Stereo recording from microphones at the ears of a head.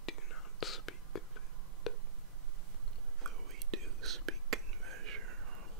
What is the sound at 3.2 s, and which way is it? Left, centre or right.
Whispering, right.